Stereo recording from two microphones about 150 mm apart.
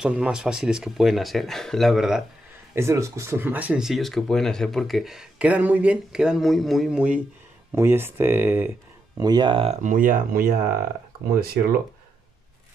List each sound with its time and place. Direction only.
0.0 s speech: 5° right (ahead or behind)
2.7 s speech: 20° right (ahead or behind)
9.2 s speech: 30° right (ahead or behind)
9.8 s speech: 65° right (ahead or behind)